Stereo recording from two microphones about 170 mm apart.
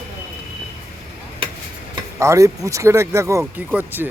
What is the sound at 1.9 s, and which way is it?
Speech, 20° right (ahead or behind).